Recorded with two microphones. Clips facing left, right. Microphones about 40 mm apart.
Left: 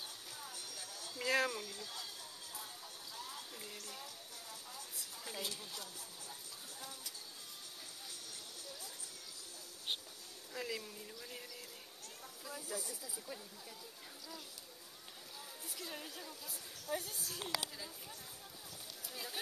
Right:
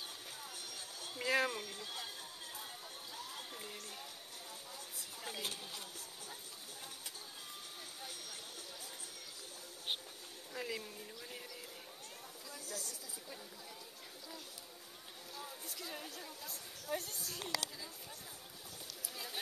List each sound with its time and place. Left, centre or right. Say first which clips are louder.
0.5 s music: right 1 dB; right
1.2 s speech: even; centre
1.5 s speech: right 1 dB; right
3.7 s speech: even; right
4.7 s a sound: right 1 dB; right
5.4 s speech: left 2 dB; right
8.0 s a sound: right 4 dB; right
10.5 s a woman's voice: even; centre
12.4 s speech: left 3 dB; centre
15.6 s a woman's voice: even; centre
17.5 s speech: right 1 dB; centre